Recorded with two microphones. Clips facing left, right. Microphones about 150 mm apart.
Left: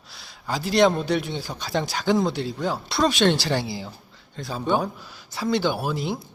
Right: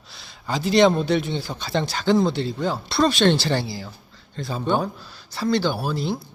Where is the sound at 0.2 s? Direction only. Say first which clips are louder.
Right 2 dB; 5° left (ahead or behind).